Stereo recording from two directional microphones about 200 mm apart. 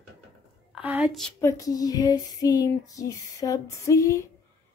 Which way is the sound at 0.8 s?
5° right (ahead or behind).